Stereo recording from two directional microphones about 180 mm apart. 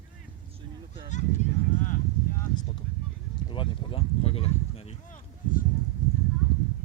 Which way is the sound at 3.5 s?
30° left (ahead or behind).